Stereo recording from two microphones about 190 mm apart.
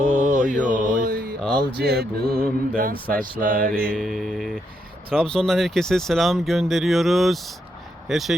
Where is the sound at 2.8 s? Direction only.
50° right (ahead or behind).